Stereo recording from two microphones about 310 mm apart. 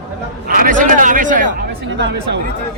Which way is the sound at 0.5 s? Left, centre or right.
Right.